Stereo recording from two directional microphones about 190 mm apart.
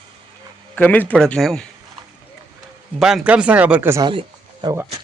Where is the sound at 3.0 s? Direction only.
5° right (ahead or behind).